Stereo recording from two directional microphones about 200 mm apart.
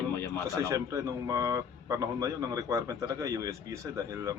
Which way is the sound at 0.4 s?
15° right (ahead or behind).